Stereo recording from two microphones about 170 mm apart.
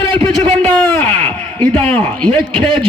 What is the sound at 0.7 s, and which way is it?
Speech, 10° left (ahead or behind).